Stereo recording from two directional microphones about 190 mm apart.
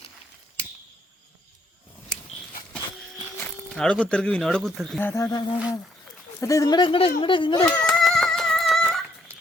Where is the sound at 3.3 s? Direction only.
5° left (ahead or behind).